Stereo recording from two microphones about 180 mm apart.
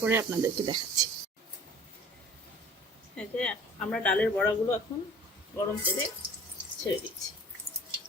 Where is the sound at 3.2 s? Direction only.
5° left (ahead or behind).